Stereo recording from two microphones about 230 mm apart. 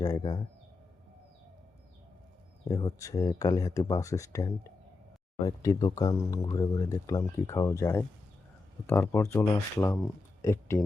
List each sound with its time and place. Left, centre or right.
0.0 s speech: centre
2.6 s speech: centre